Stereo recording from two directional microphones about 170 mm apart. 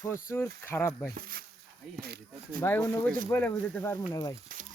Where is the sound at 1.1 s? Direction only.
60° right (ahead or behind).